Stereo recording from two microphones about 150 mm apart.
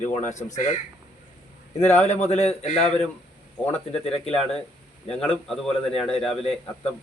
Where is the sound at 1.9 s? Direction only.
45° left (ahead or behind).